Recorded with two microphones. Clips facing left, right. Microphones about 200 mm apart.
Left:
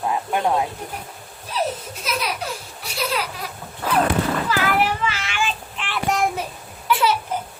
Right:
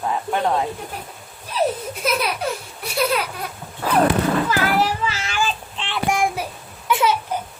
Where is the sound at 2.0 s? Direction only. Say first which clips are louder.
Right 5 dB; 55° right (ahead or behind).